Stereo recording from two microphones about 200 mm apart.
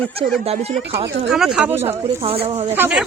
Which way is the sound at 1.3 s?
5° right (ahead or behind).